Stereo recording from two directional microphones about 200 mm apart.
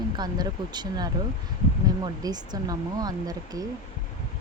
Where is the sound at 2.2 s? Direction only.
20° right (ahead or behind).